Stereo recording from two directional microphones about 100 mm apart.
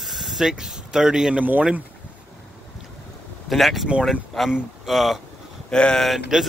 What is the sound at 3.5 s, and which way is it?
Speech, centre (ahead or behind).